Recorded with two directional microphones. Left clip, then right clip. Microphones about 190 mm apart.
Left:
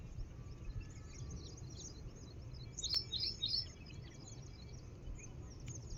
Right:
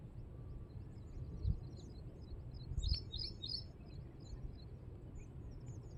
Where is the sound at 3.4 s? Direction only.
15° left (ahead or behind).